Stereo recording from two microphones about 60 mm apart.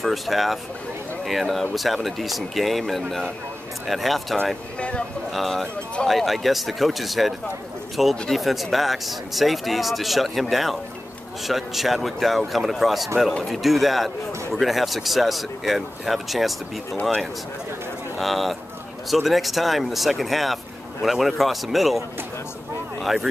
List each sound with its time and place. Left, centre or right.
0.0 s speech: centre
4.7 s speech: centre
5.3 s speech: centre
18.1 s speech: centre